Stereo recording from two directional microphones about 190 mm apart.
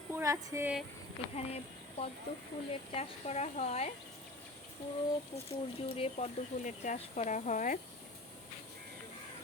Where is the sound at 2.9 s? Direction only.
35° left (ahead or behind).